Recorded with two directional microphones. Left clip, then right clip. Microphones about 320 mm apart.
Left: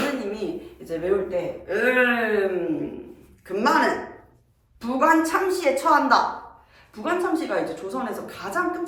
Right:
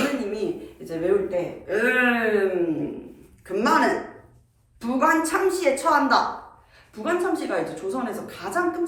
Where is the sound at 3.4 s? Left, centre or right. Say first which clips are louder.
Even; centre.